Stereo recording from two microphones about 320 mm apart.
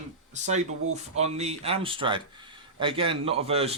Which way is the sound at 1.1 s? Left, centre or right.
Centre.